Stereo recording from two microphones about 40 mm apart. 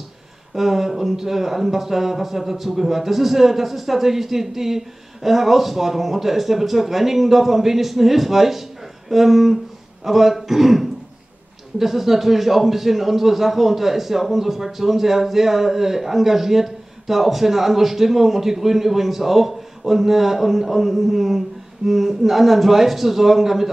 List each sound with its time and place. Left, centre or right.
0.6 s a man's voice: centre